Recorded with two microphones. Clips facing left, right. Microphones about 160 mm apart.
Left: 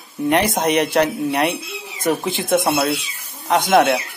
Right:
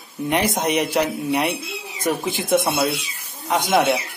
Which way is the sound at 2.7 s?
Centre (ahead or behind).